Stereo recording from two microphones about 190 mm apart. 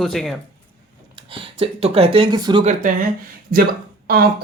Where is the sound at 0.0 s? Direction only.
Centre (ahead or behind).